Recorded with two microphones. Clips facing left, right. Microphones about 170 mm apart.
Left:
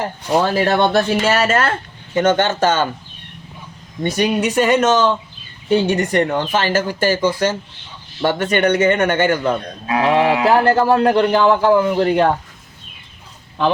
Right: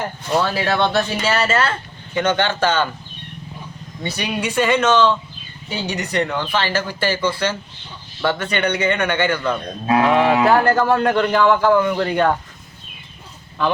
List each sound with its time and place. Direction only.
0.4 s a man's voice: 45° left (ahead or behind)
4.0 s speech: 45° left (ahead or behind)
5.6 s a man's voice: 55° left (ahead or behind)
10.0 s speech: 30° left (ahead or behind)